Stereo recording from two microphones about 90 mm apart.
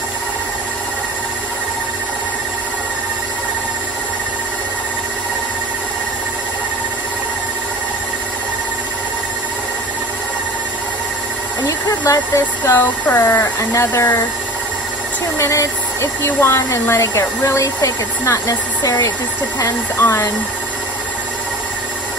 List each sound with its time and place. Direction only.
11.9 s a sound: 35° left (ahead or behind)
12.6 s speech: 25° left (ahead or behind)
15.4 s speech: 30° left (ahead or behind)